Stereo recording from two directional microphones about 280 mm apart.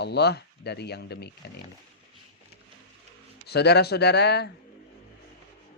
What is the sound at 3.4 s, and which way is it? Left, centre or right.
Speech, left.